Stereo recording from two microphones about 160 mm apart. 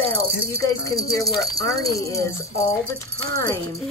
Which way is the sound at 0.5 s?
20° left (ahead or behind).